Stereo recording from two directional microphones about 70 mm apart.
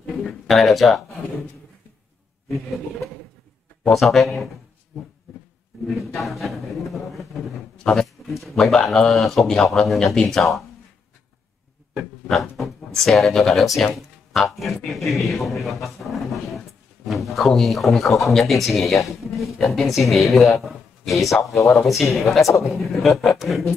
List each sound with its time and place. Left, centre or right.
0.0 s a sound: centre
3.9 s a man's voice: centre
5.9 s a man's voice: centre
7.8 s speech: centre
8.3 s a man's voice: centre
12.3 s a man's voice: centre
21.5 s speech: left
21.8 s a man's voice: centre